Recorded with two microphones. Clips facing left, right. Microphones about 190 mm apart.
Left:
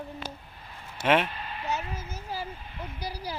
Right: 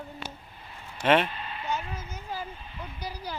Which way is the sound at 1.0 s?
10° left (ahead or behind).